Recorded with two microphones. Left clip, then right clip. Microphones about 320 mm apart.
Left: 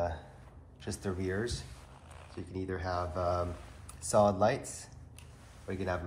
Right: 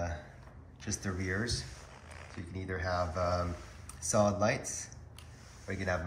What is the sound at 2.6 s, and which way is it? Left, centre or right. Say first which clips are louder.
Speech: right 2 dB; centre.